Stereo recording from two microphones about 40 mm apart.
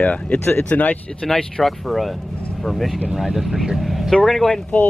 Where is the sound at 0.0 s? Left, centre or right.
Left.